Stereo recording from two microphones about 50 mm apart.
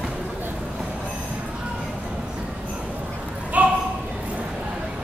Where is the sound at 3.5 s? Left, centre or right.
Right.